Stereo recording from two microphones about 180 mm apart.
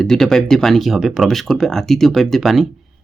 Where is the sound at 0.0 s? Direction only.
Centre (ahead or behind).